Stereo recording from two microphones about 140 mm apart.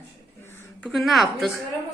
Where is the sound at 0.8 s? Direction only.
Centre (ahead or behind).